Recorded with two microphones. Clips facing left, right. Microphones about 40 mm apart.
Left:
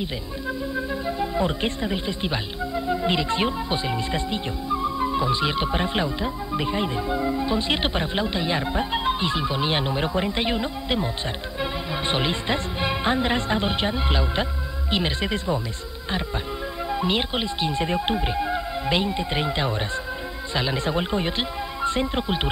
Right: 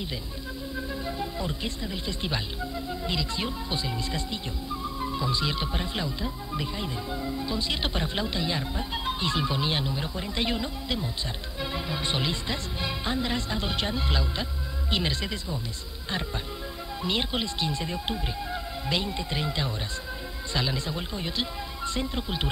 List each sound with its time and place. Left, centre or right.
0.7 s music: left
1.3 s speech: left
2.0 s speech: left
2.9 s speech: left
9.2 s speech: centre
9.7 s speech: left
9.9 s speech: left
10.3 s speech: left
15.3 s speech: left
16.9 s speech: left
20.7 s speech: left
21.4 s speech: left